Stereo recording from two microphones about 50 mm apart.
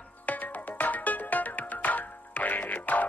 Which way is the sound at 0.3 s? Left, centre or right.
Left.